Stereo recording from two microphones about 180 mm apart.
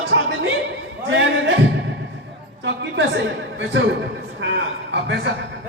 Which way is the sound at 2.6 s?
80° right.